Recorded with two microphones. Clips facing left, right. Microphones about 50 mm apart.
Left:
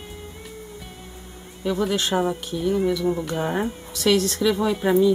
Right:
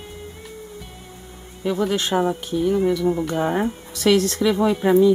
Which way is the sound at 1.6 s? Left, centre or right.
Centre.